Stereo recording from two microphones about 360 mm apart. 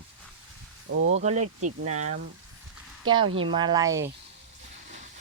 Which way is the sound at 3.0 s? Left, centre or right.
Centre.